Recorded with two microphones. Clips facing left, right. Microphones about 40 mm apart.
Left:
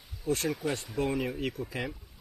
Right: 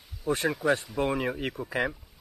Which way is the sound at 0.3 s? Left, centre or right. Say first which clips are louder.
Right 5 dB; right.